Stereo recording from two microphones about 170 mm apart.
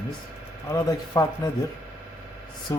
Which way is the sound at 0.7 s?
20° left (ahead or behind).